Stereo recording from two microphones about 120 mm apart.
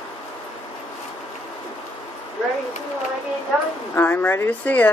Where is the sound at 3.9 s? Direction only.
15° left (ahead or behind).